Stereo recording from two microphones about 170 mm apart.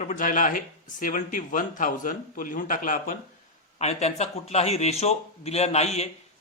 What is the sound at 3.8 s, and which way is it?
A man's voice, 40° left (ahead or behind).